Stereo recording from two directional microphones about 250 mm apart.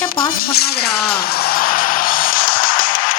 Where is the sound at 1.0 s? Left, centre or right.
Left.